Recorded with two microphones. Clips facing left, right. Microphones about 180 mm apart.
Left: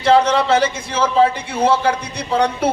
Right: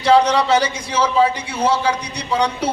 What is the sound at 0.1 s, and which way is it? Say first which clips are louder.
A man's voice: even; 55° left (ahead or behind).